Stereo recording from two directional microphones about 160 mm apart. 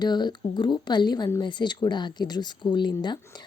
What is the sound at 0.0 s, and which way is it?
Speech, 25° left (ahead or behind).